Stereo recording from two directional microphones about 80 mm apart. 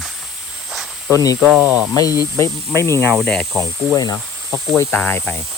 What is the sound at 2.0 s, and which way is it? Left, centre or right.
Speech, left.